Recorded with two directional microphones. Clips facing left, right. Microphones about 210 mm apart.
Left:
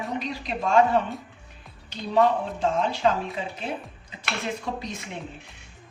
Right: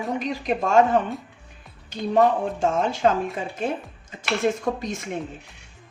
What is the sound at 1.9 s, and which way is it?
Speech, 50° right (ahead or behind).